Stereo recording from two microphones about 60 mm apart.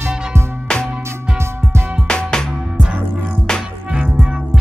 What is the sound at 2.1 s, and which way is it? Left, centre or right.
Music, centre.